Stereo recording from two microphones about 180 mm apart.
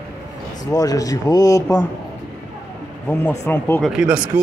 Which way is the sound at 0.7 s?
20° left (ahead or behind).